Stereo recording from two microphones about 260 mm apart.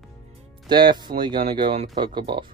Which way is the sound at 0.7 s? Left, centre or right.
Centre.